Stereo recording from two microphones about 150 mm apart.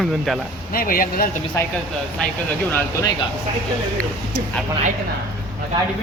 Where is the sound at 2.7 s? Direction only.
20° left (ahead or behind).